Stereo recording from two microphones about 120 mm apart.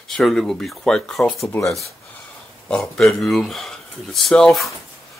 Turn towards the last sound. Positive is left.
turn(degrees=0)  # may be behind; listen again after turning